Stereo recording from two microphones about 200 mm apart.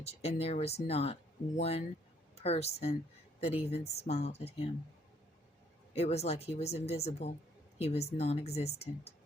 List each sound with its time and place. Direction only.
0.0 s a woman's voice: 30° left (ahead or behind)
5.9 s speech: 30° left (ahead or behind)